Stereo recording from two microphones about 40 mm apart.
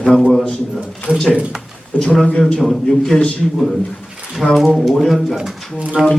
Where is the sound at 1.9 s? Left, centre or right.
Left.